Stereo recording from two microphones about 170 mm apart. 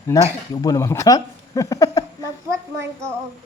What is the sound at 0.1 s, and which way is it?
Speech, 10° left (ahead or behind).